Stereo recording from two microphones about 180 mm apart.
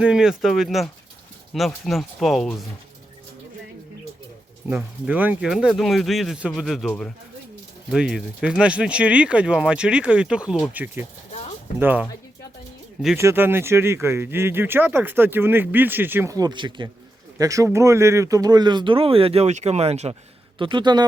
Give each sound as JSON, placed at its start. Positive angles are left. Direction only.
{"t": 0.0, "sound": "speech", "side_deg": -5}
{"t": 4.7, "sound": "speech", "side_deg": -10}
{"t": 11.3, "sound": "a sound", "side_deg": 35}
{"t": 11.8, "sound": "speech", "side_deg": -10}
{"t": 13.1, "sound": "speech", "side_deg": -15}